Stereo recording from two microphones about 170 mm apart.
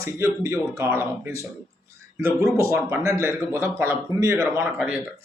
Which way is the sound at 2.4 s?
15° right (ahead or behind).